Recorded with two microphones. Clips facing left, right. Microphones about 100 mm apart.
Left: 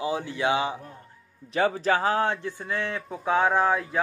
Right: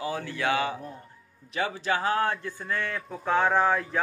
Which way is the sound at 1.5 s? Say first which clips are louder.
Left 5 dB; 35° left (ahead or behind).